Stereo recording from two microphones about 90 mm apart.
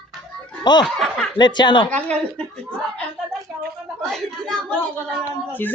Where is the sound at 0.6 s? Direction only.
55° left (ahead or behind).